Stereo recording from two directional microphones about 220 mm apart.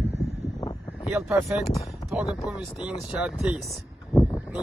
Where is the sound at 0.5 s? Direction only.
15° left (ahead or behind).